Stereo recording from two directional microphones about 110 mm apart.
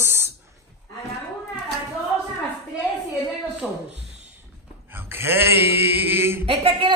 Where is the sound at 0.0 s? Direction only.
20° right (ahead or behind).